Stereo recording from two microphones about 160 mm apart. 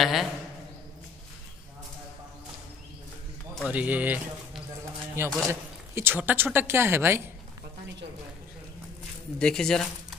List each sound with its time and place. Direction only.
0.0 s a man's voice: centre (ahead or behind)
3.6 s a woman's voice: 10° right (ahead or behind)
9.4 s speech: 5° left (ahead or behind)